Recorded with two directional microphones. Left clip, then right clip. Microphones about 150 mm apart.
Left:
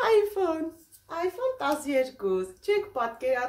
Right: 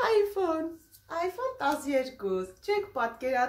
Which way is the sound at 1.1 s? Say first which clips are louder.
Left 3 dB; 10° left (ahead or behind).